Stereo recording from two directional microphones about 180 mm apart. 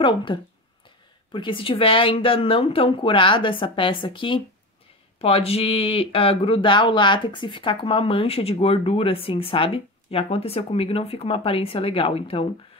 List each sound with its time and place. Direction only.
0.0 s a woman's voice: 30° left (ahead or behind)